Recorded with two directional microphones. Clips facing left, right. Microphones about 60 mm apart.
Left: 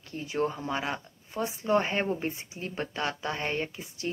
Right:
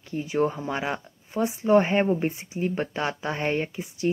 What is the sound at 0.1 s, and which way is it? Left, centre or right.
Speech, right.